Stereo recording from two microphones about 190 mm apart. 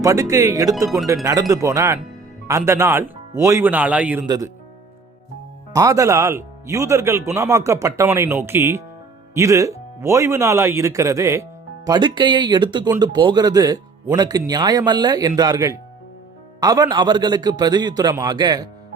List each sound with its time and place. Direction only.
0.0 s speech: 15° right (ahead or behind)
5.7 s speech: 15° right (ahead or behind)